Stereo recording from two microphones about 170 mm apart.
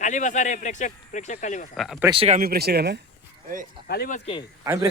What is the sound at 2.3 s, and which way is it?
Speech, 60° right (ahead or behind).